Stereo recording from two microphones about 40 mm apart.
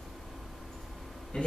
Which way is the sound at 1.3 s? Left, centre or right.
Left.